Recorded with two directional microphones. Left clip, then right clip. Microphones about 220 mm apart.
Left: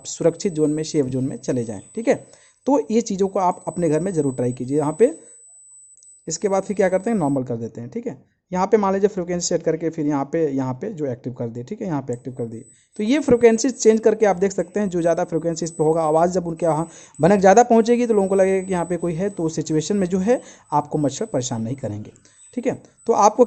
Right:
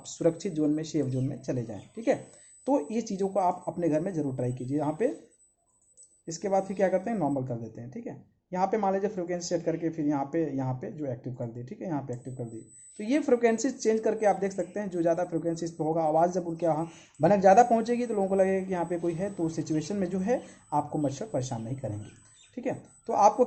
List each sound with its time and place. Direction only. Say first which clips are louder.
0.0 s speech: left 8 dB; 40° left (ahead or behind)
6.2 s speech: left 7 dB; 50° left (ahead or behind)